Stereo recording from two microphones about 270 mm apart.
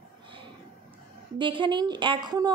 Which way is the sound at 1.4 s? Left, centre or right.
Centre.